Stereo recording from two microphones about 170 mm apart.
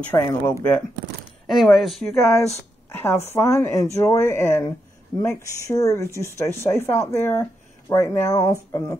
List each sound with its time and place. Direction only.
0.1 s speech: 15° left (ahead or behind)
1.5 s speech: centre (ahead or behind)
2.1 s speech: 15° left (ahead or behind)